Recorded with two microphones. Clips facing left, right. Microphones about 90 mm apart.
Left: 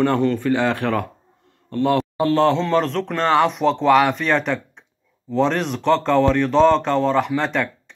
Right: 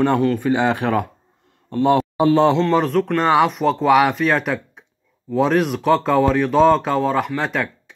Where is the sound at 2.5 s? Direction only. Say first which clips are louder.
Right 3 dB; 5° right (ahead or behind).